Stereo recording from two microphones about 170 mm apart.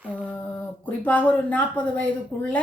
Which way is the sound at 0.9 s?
10° left (ahead or behind).